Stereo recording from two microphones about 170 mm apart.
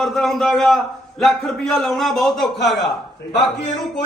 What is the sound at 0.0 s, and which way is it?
A man's voice, centre (ahead or behind).